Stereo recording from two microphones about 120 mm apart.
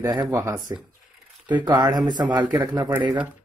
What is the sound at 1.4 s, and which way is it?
Speech, 35° right (ahead or behind).